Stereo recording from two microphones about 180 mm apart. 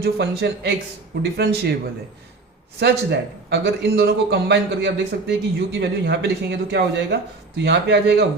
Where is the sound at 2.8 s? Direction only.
70° right (ahead or behind).